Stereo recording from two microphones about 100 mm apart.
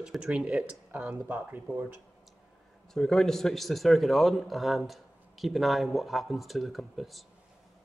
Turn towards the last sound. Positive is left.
turn(degrees=0)  # may be behind; listen again after turning